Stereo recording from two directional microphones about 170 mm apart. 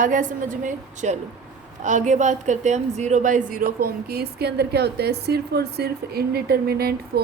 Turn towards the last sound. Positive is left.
turn(degrees=-65)  # may be behind; listen again after turning